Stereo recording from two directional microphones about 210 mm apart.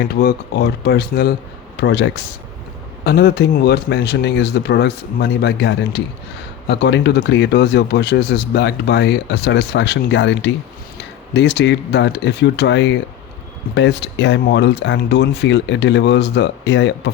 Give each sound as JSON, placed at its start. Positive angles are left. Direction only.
{"t": 0.1, "sound": "speech", "side_deg": 50}